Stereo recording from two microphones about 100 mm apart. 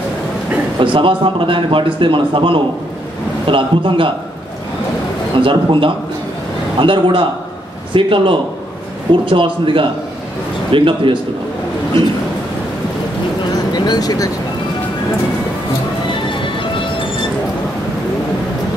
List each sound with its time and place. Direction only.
0.7 s a man's voice: 55° right (ahead or behind)
5.4 s a man's voice: 60° right (ahead or behind)
13.7 s speech: 40° left (ahead or behind)
16.3 s music: 55° left (ahead or behind)